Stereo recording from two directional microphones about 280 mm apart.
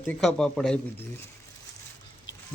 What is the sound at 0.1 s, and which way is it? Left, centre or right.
Speech, centre.